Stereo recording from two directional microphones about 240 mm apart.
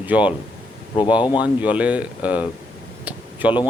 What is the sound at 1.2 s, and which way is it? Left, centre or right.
Speech, centre.